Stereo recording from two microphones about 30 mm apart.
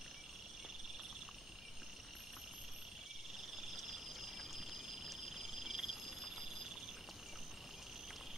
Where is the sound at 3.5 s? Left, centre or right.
Centre.